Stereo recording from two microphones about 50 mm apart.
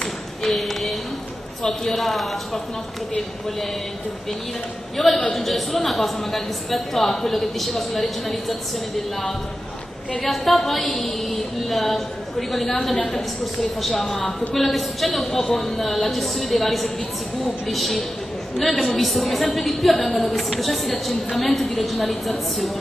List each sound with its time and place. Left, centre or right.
0.4 s a woman's voice: centre
4.9 s a woman's voice: centre